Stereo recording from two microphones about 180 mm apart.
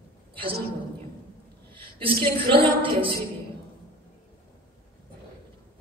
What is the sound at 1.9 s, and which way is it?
A woman's voice, 30° right (ahead or behind).